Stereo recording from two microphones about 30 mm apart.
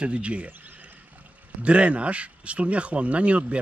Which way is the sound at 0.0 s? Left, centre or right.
Right.